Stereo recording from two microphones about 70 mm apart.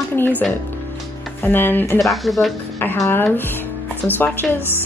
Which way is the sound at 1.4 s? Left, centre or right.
Left.